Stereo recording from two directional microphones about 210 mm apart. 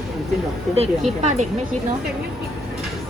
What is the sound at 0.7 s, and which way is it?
Speech, 30° right (ahead or behind).